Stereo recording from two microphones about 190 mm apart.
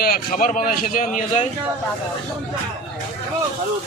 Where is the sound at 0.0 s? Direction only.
50° left (ahead or behind).